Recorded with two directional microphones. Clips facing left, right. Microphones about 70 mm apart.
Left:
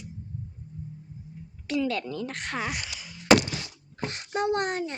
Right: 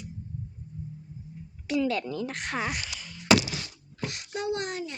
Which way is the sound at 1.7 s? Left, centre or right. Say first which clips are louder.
Right 1 dB; centre.